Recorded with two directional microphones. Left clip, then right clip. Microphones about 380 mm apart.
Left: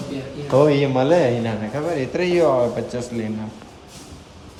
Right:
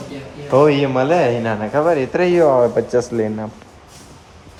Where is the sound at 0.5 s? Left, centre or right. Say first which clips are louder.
Right 3 dB; centre.